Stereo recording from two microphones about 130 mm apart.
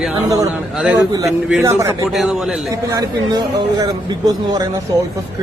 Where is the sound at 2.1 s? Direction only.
Centre (ahead or behind).